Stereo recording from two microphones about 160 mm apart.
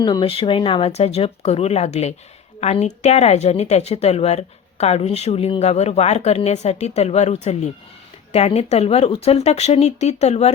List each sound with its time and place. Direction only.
0.0 s speech: 30° left (ahead or behind)